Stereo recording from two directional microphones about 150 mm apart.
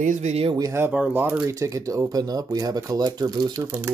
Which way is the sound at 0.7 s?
10° right (ahead or behind).